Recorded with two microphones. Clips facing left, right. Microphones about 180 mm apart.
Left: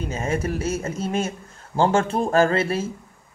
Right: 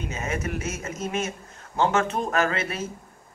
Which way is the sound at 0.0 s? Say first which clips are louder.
Left 5 dB; 30° left (ahead or behind).